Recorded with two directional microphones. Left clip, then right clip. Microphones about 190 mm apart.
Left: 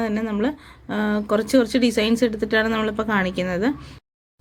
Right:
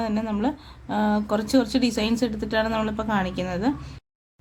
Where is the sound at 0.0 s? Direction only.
15° left (ahead or behind).